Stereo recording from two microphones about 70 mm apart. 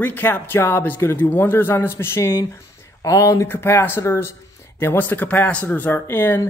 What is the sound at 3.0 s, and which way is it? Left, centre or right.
Speech, left.